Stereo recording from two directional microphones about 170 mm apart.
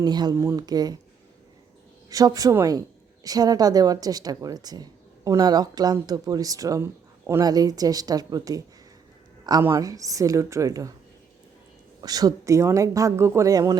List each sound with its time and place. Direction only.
0.0 s speech: 25° right (ahead or behind)
2.0 s speech: 20° right (ahead or behind)
12.0 s speech: 20° right (ahead or behind)